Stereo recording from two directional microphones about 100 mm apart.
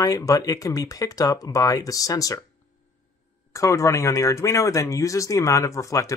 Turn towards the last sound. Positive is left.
turn(degrees=35)  # may be behind; listen again after turning